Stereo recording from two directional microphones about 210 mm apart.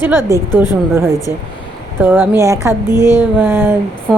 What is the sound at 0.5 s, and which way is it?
Speech, 20° left (ahead or behind).